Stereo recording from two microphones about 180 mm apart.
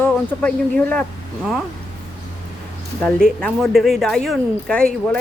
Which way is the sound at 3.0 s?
5° left (ahead or behind).